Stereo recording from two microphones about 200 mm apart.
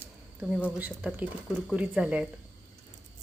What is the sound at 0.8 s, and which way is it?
Speech, 10° right (ahead or behind).